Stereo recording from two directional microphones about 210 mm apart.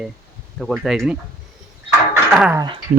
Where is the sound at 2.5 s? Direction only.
20° right (ahead or behind).